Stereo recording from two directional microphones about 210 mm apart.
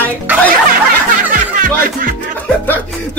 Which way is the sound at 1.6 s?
40° right (ahead or behind).